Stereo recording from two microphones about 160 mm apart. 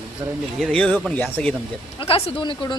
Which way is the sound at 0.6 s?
5° left (ahead or behind).